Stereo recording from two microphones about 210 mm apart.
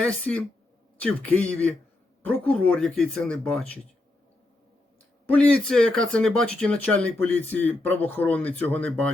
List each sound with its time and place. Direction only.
0.0 s speech: 5° left (ahead or behind)
5.3 s speech: 5° left (ahead or behind)